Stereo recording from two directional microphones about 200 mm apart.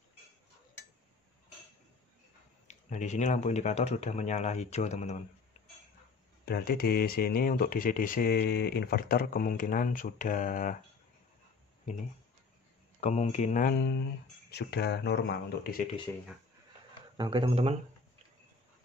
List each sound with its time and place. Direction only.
2.7 s speech: 35° left (ahead or behind)
6.4 s speech: 50° left (ahead or behind)
13.0 s speech: 35° left (ahead or behind); by 15.7 s 55° left (ahead or behind)
16.1 s speech: 15° left (ahead or behind)
17.2 s speech: 25° right (ahead or behind)